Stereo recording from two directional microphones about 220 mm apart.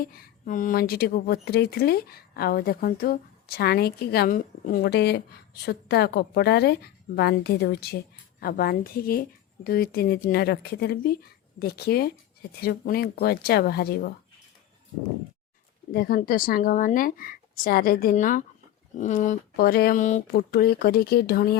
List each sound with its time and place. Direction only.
0.0 s speech: 40° left (ahead or behind)
15.9 s speech: 45° left (ahead or behind)